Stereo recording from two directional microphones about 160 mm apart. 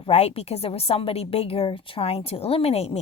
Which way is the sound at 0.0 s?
40° left (ahead or behind).